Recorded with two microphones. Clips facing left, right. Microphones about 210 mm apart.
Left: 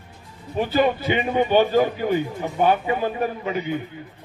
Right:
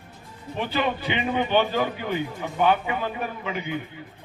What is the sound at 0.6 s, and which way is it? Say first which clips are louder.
A man's voice: left 6 dB; 40° left (ahead or behind).